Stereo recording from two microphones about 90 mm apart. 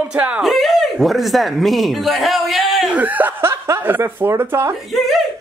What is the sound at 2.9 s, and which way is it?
Speech, 20° right (ahead or behind).